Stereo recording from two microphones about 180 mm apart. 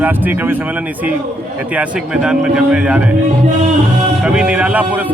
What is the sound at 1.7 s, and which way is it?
A man's voice, 5° right (ahead or behind).